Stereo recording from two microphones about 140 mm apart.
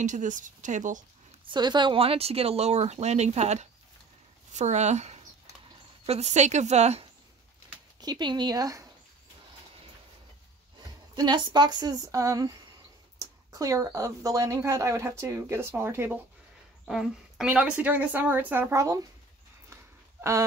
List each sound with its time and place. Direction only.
0.0 s speech: 60° right (ahead or behind)
1.4 s a woman's voice: 30° right (ahead or behind); by 7.1 s 50° right (ahead or behind)
8.0 s speech: 30° right (ahead or behind)
11.1 s speech: 35° right (ahead or behind); by 16.2 s 15° right (ahead or behind)
16.8 s a woman's voice: 5° right (ahead or behind); by 18.9 s 20° right (ahead or behind)
19.7 s a sound: 20° right (ahead or behind)